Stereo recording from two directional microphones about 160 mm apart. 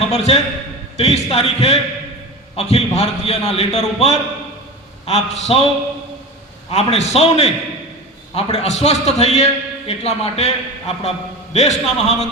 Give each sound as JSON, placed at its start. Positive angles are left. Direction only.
{"t": 0.1, "sound": "a man's voice", "side_deg": 40}
{"t": 6.7, "sound": "a man's voice", "side_deg": 40}